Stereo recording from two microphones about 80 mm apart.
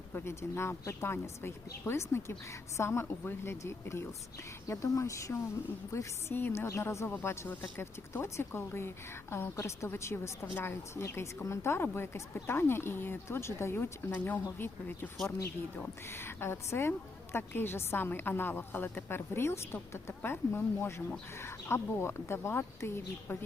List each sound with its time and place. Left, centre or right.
0.1 s a woman's voice: left